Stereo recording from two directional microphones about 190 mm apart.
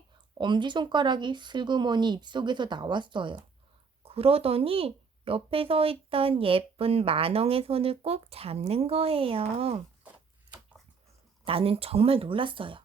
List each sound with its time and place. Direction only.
0.3 s speech: 25° right (ahead or behind)
11.4 s speech: 30° right (ahead or behind)